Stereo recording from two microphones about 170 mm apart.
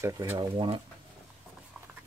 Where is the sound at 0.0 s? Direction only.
20° right (ahead or behind).